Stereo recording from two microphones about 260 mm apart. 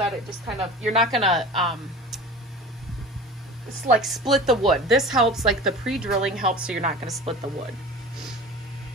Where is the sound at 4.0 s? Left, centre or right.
Centre.